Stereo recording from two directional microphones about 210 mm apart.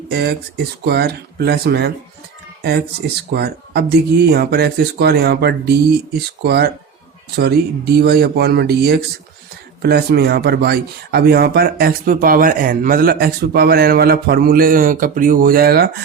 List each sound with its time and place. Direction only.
0.1 s speech: 50° right (ahead or behind)